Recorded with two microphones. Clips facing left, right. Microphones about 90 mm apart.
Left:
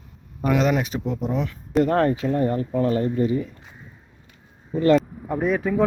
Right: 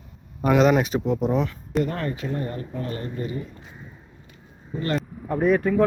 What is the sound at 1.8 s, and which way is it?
Speech, 85° left.